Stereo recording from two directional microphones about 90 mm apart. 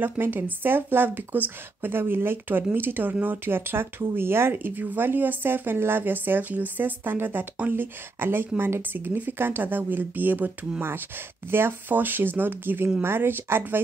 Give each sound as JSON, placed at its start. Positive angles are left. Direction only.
{"t": 0.0, "sound": "speech", "side_deg": -20}